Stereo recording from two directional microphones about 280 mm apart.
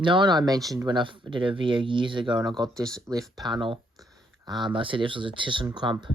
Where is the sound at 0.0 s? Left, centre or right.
Centre.